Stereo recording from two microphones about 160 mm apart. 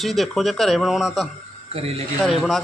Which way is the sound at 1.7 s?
40° right (ahead or behind).